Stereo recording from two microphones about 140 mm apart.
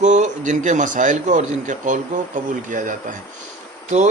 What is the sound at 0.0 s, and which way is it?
A man's voice, 60° right (ahead or behind).